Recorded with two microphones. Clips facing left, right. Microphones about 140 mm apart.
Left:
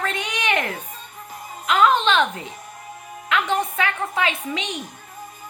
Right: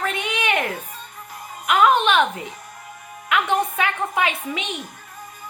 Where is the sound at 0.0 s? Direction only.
10° right (ahead or behind).